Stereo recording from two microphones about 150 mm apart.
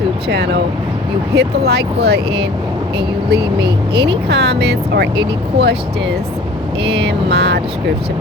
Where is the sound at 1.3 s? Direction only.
90° right.